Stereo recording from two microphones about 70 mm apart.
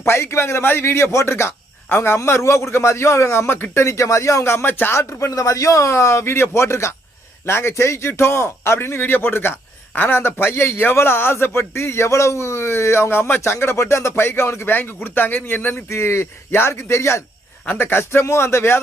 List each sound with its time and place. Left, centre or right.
0.0 s speech: left
4.9 s speech: left